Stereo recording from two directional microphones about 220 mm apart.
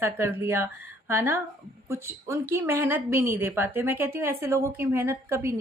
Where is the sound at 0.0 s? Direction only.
10° right (ahead or behind).